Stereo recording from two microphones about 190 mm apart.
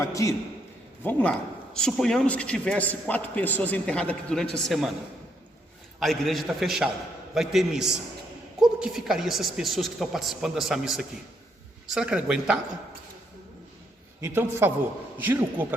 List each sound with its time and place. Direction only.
0.0 s a man's voice: 15° left (ahead or behind); by 4.9 s centre (ahead or behind)
6.0 s a woman's voice: centre (ahead or behind)
14.2 s a man's voice: 15° right (ahead or behind)